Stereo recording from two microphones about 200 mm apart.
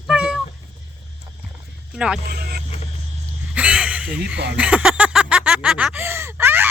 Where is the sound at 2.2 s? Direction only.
50° right (ahead or behind).